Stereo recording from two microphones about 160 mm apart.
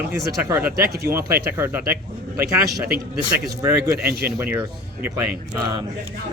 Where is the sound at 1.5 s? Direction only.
10° right (ahead or behind).